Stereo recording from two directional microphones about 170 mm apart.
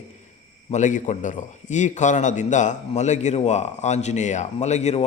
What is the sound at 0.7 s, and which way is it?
A man's voice, 45° left (ahead or behind).